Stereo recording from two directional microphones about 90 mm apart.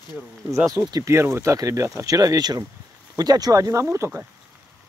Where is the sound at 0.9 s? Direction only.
35° right (ahead or behind).